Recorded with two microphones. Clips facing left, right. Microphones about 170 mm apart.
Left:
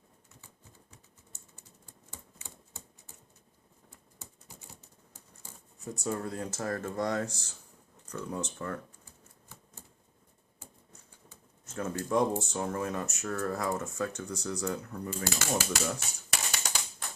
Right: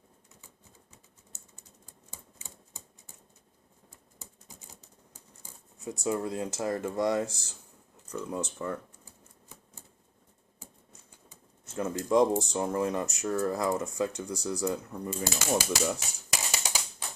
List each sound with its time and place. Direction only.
5.8 s speech: 10° right (ahead or behind)
11.3 s speech: 10° right (ahead or behind)